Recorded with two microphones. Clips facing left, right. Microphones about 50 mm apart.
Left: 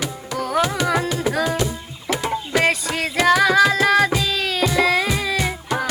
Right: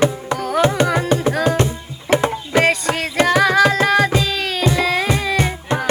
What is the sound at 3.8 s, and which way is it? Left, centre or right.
Tabla, centre.